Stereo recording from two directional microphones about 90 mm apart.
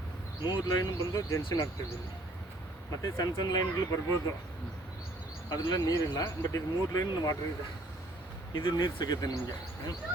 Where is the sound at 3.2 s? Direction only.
45° left (ahead or behind).